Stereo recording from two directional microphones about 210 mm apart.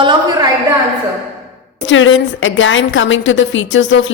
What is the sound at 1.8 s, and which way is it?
A woman's voice, 65° left (ahead or behind).